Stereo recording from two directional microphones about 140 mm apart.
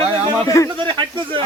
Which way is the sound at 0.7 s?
35° right (ahead or behind).